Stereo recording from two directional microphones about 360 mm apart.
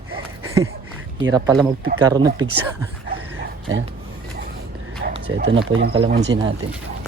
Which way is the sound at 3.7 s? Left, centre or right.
Right.